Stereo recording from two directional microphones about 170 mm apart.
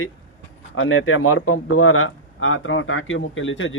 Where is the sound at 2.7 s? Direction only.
90° left.